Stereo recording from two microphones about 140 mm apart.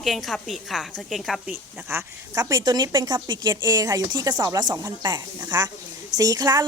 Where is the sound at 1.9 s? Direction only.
20° right (ahead or behind).